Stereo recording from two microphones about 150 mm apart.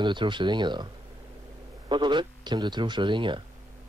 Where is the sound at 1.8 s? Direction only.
30° right (ahead or behind).